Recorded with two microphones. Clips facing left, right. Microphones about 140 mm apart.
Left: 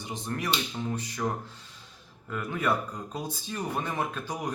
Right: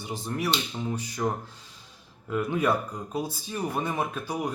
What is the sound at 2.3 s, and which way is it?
Speech, 15° right (ahead or behind).